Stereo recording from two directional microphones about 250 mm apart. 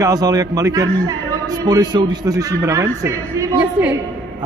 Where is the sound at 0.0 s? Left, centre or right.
Centre.